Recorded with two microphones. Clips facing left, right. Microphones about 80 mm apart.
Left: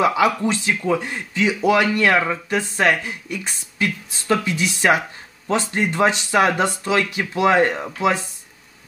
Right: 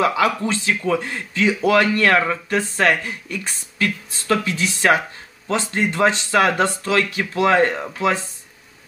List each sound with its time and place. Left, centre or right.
0.0 s speech: left